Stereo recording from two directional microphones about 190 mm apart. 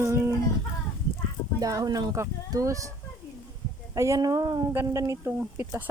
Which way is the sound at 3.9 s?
15° right (ahead or behind).